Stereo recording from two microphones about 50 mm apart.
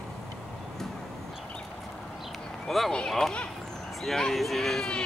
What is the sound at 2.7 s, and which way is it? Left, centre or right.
Speech, centre.